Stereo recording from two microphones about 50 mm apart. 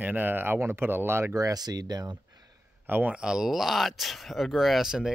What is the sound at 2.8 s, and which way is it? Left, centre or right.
Speech, right.